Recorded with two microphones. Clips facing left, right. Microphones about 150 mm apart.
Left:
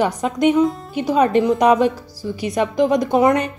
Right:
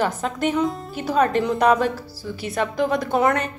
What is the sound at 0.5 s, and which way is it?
Speech, centre (ahead or behind).